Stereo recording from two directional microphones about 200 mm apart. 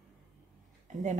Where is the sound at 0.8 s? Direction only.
35° right (ahead or behind).